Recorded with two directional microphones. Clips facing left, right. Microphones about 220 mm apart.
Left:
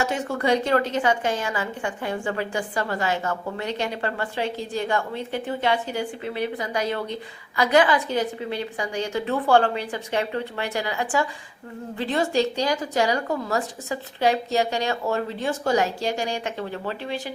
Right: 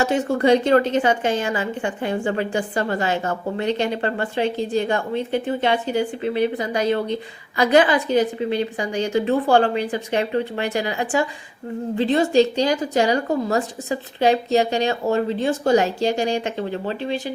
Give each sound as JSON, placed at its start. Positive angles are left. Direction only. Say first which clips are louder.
{"t": 0.0, "sound": "a woman's voice", "louder": "right 6 dB", "side_deg": -30}